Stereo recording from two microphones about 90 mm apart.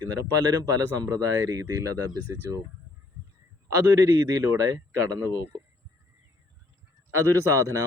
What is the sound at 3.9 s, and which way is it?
Speech, 35° right (ahead or behind).